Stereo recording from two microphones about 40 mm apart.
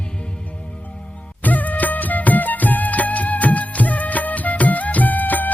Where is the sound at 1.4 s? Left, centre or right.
Left.